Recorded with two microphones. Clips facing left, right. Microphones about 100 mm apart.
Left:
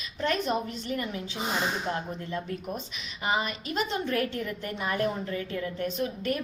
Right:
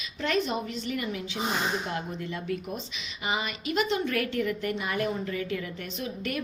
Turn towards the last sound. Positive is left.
turn(degrees=35)  # may be behind; listen again after turning